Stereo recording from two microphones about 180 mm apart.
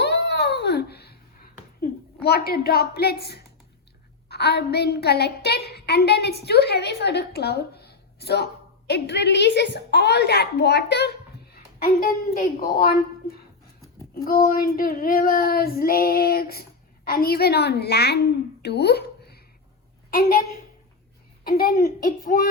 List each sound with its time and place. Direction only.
0.0 s a sound: 70° left (ahead or behind)
2.2 s a woman's voice: 60° left (ahead or behind)
11.5 s a woman's voice: 55° left (ahead or behind)
14.3 s a woman's voice: 55° left (ahead or behind)
21.4 s a child's voice: 55° left (ahead or behind)